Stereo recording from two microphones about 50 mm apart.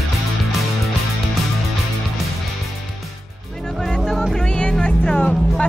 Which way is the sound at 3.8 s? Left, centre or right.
Centre.